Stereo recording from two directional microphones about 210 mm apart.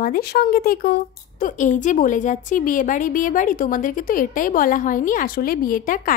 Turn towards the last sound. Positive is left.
turn(degrees=40)  # may be behind; listen again after turning